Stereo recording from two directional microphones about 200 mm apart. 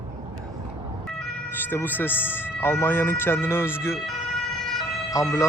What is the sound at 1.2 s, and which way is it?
Speech, 10° left (ahead or behind).